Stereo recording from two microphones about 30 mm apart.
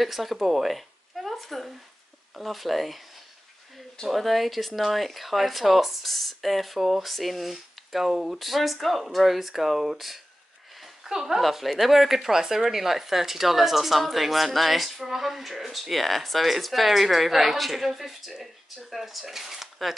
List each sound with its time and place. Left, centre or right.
0.0 s speech: centre
0.5 s a sound: centre
2.4 s speech: centre
4.1 s speech: centre
11.4 s speech: centre
12.4 s speech: centre